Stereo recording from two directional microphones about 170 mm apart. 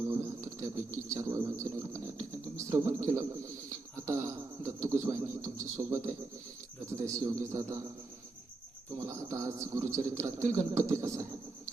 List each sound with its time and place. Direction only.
0.1 s a sound: 15° right (ahead or behind)
1.1 s speech: 20° right (ahead or behind)
7.2 s speech: 20° right (ahead or behind)
9.0 s speech: 20° right (ahead or behind)
11.0 s vehicle: 15° right (ahead or behind)